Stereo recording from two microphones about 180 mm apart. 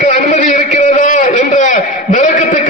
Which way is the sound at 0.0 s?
40° left (ahead or behind).